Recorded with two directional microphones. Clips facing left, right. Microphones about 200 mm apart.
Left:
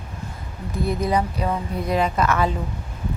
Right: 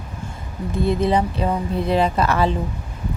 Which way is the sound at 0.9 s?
25° right (ahead or behind).